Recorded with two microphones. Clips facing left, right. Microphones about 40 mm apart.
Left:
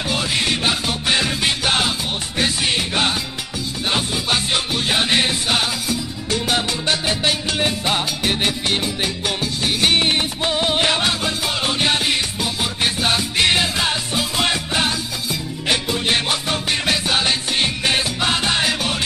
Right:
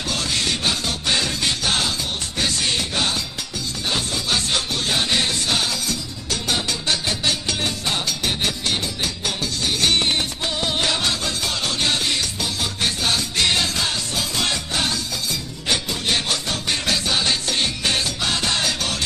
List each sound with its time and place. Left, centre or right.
0.1 s music: left